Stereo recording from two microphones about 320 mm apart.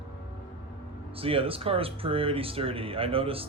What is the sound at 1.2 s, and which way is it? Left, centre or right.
Speech, centre.